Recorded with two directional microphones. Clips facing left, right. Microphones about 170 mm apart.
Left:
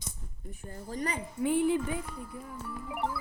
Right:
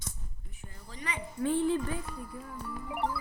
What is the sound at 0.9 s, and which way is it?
Speech, 40° left (ahead or behind).